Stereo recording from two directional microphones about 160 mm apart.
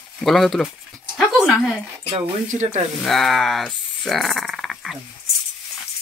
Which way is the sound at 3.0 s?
Centre (ahead or behind).